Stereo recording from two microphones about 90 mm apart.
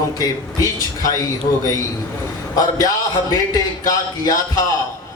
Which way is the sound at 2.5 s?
40° left (ahead or behind).